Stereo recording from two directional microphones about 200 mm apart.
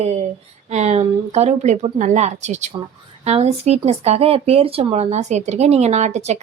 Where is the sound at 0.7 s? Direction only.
35° right (ahead or behind).